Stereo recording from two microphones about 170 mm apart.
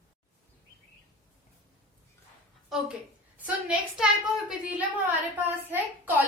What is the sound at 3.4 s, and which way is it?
A woman's voice, 5° right (ahead or behind).